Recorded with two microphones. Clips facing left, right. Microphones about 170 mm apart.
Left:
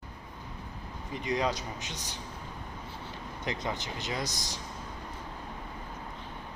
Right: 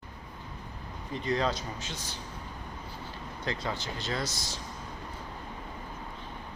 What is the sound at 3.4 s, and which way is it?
Speech, 20° left (ahead or behind).